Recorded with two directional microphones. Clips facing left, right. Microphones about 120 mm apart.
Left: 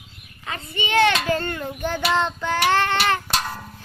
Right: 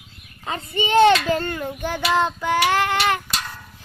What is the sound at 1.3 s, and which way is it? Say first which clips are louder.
Child singing: right 1 dB; 10° right (ahead or behind).